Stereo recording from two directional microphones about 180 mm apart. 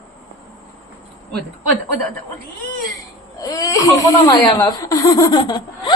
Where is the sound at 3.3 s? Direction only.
20° left (ahead or behind).